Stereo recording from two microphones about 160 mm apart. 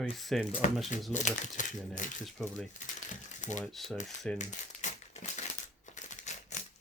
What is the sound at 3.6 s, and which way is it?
Speech, centre (ahead or behind).